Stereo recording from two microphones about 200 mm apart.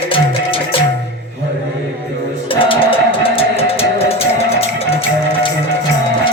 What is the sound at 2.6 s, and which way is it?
Music, 25° left (ahead or behind).